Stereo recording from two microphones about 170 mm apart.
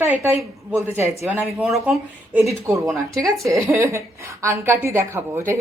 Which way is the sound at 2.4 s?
15° right (ahead or behind).